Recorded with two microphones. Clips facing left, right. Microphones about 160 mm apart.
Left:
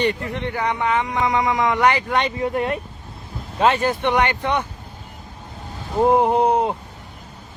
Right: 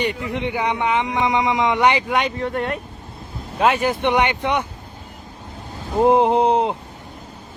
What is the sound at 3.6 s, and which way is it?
A man's voice, 10° right (ahead or behind).